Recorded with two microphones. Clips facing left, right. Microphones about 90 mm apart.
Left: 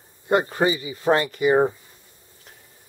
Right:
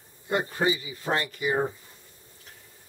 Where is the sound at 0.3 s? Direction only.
65° left (ahead or behind).